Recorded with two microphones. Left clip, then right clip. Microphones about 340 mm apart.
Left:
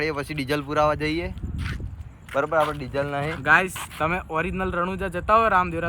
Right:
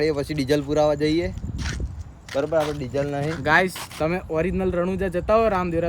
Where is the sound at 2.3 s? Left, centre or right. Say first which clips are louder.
Even; centre.